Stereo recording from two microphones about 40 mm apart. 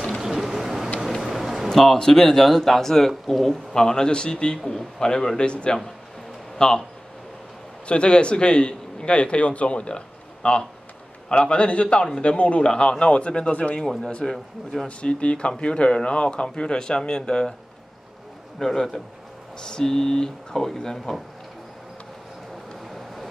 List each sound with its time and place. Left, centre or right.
0.2 s vehicle: centre
1.2 s music: centre
1.7 s speech: centre
7.8 s a man's voice: left
13.7 s speech: centre
14.3 s speech: centre
14.9 s speech: left
18.6 s speech: centre
22.8 s vehicle: centre